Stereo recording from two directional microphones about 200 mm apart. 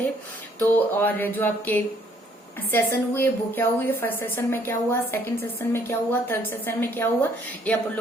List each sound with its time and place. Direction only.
0.6 s a woman's voice: 10° left (ahead or behind)